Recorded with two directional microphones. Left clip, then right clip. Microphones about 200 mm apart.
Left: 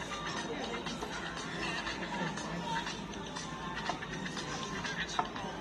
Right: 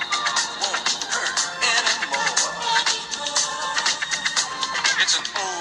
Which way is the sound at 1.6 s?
45° right (ahead or behind).